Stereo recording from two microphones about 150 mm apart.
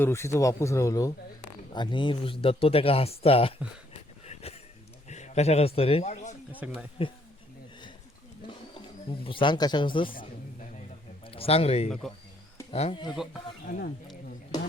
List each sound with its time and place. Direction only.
0.0 s speech: 20° left (ahead or behind)
1.7 s speech: 30° left (ahead or behind)
5.0 s a man's voice: 50° left (ahead or behind)
6.6 s speech: 10° right (ahead or behind)
7.0 s speech: 40° left (ahead or behind)
8.4 s speech: 35° left (ahead or behind)
10.1 s a sound: 65° left (ahead or behind)
11.3 s speech: 40° left (ahead or behind)
13.7 s speech: 75° left (ahead or behind)